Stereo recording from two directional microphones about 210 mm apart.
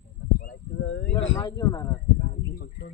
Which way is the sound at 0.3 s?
55° left (ahead or behind).